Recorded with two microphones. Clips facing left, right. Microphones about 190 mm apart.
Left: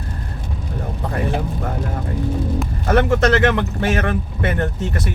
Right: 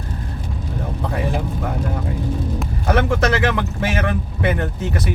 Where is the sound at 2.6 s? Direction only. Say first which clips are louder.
Left 2 dB; centre (ahead or behind).